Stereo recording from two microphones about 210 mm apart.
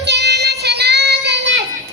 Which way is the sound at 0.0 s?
50° right (ahead or behind).